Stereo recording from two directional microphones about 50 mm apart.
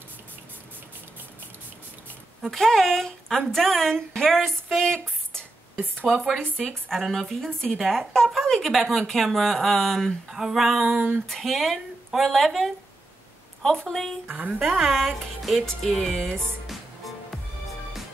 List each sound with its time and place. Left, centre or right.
2.4 s a woman's voice: centre
6.5 s a woman's voice: centre
10.3 s speech: centre
10.9 s a woman's voice: right
11.2 s a woman's voice: centre
14.3 s a woman's voice: right
14.7 s speech: centre
16.6 s music: centre